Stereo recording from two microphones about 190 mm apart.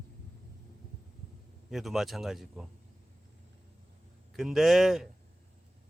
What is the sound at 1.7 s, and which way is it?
Speech, centre (ahead or behind).